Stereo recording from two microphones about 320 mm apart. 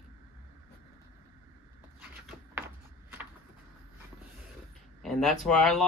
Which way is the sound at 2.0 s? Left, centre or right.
Centre.